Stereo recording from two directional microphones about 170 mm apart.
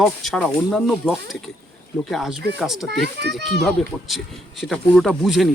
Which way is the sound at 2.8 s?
75° right (ahead or behind).